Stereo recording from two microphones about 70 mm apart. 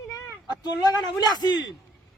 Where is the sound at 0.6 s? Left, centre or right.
Left.